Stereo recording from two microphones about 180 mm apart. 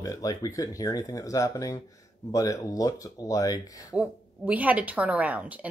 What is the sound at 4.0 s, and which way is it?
A woman's voice, 10° right (ahead or behind).